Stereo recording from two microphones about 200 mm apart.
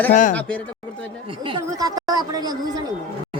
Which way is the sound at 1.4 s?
20° right (ahead or behind).